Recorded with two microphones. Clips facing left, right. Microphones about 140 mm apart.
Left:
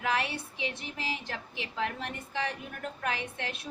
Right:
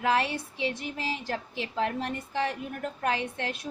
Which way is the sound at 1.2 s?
45° right (ahead or behind).